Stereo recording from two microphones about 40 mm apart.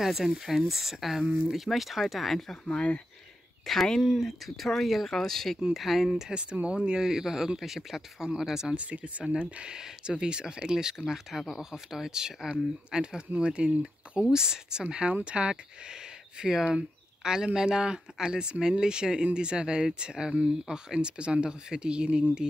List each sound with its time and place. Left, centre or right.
0.0 s speech: centre
2.5 s speech: left
3.7 s speech: centre
5.7 s speech: centre
6.3 s speech: right
7.0 s speech: centre
8.7 s speech: right
9.8 s speech: centre